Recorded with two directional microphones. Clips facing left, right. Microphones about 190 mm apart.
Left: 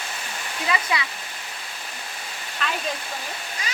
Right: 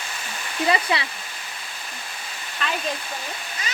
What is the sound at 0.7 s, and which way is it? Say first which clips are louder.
Speech: right 3 dB; 30° right (ahead or behind).